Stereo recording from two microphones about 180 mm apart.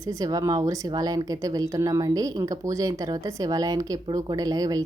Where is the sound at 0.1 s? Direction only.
20° right (ahead or behind).